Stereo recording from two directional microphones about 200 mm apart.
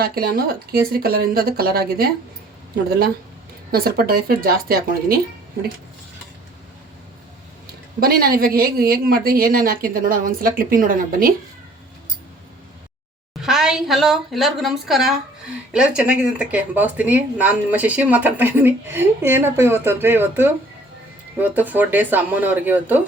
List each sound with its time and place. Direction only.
0.0 s speech: 50° right (ahead or behind)
3.7 s speech: 50° right (ahead or behind)
7.9 s speech: 45° right (ahead or behind)
13.4 s a woman's voice: centre (ahead or behind)